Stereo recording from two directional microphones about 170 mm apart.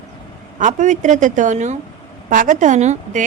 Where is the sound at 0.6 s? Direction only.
45° right (ahead or behind).